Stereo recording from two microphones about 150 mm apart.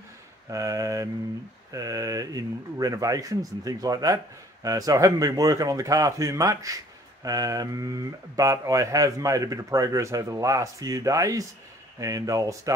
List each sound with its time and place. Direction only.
0.5 s speech: 20° right (ahead or behind)